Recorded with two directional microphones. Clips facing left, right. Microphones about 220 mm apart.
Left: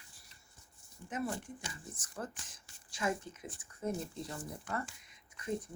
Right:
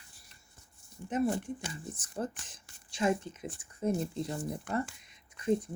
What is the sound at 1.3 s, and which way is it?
Speech, 70° right (ahead or behind).